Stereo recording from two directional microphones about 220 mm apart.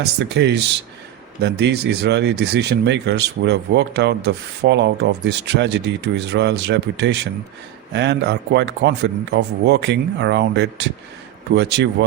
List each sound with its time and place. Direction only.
0.0 s speech: 50° right (ahead or behind)